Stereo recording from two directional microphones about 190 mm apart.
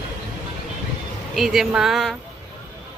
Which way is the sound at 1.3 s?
Centre (ahead or behind).